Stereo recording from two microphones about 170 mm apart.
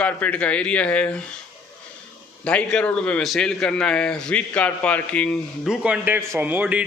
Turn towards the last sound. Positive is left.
turn(degrees=-10)  # may be behind; listen again after turning